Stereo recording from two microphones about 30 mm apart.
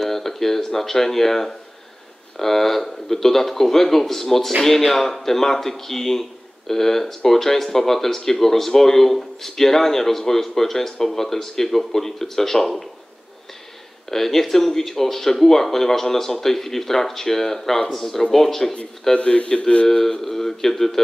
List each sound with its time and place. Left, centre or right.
0.0 s speech: centre
14.1 s speech: centre
19.1 s a man's voice: left
19.9 s speech: centre